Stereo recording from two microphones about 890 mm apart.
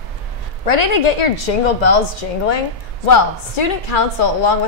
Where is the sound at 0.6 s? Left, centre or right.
Left.